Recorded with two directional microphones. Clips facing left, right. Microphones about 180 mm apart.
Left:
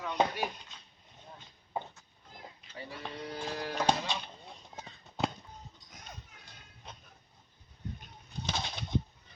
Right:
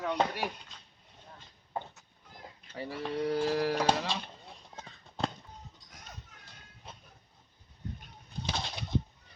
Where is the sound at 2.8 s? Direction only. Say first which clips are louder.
Right 6 dB; 90° right.